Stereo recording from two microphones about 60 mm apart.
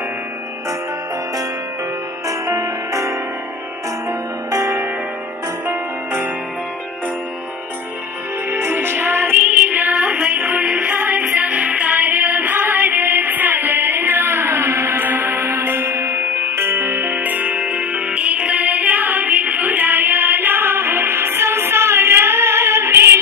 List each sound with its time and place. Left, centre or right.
2.2 s music: right
4.5 s music: right
8.5 s music: right
15.9 s music: right